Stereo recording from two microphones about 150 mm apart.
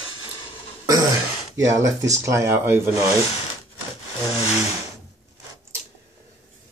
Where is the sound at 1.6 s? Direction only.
20° right (ahead or behind).